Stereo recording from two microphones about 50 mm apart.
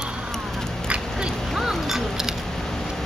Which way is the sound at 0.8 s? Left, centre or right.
Right.